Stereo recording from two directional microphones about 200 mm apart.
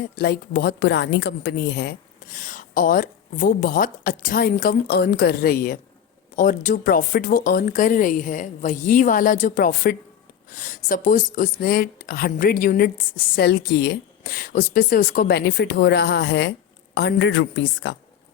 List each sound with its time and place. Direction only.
0.2 s a woman's voice: 50° left (ahead or behind)
2.3 s a woman's voice: 40° left (ahead or behind); by 17.9 s 65° left (ahead or behind)